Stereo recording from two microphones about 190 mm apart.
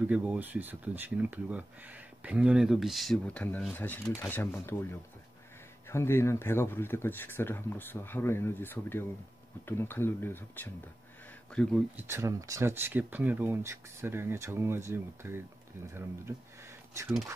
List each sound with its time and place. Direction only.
0.0 s speech: 5° right (ahead or behind); by 4.8 s 15° left (ahead or behind)
5.9 s speech: 15° left (ahead or behind)
12.0 s speech: 15° right (ahead or behind)